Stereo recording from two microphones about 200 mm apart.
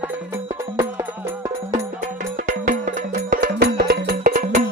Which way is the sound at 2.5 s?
40° right (ahead or behind).